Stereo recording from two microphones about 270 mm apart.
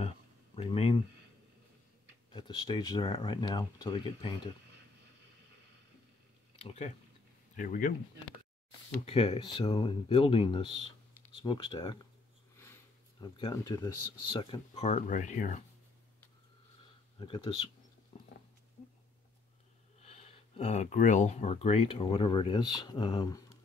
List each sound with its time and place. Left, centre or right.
0.6 s a sound: left
2.3 s speech: centre
6.6 s speech: left
9.0 s speech: left
13.4 s speech: centre; by 15.6 s left
17.2 s speech: centre
20.0 s speech: left